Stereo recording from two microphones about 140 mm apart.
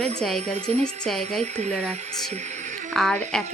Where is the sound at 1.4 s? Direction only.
50° right (ahead or behind).